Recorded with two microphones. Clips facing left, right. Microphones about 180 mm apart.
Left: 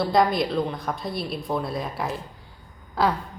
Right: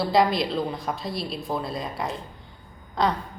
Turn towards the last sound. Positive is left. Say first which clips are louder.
# left 1 dB
turn(degrees=5)  # may be behind; listen again after turning